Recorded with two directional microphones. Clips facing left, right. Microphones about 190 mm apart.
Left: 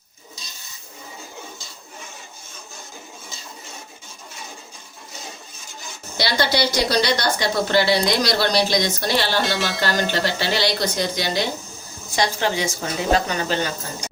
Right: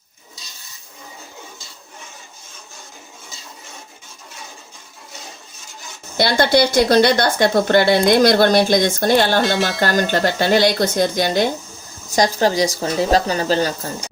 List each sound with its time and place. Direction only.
6.1 s a woman's voice: 50° right (ahead or behind)
9.4 s speech: centre (ahead or behind)
9.8 s a woman's voice: 50° right (ahead or behind)
12.1 s speech: 40° right (ahead or behind)